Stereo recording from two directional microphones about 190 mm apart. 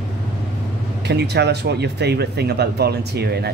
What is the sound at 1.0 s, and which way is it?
Speech, 60° right (ahead or behind).